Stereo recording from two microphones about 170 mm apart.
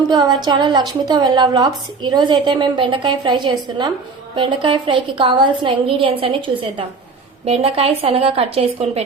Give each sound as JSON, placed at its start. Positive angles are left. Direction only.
{"t": 0.1, "sound": "a woman's voice", "side_deg": -25}